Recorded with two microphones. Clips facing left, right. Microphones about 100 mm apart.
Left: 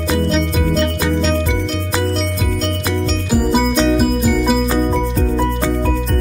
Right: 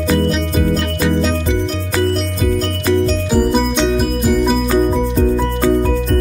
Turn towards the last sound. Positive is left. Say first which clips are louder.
# even
turn(degrees=0)  # may be behind; listen again after turning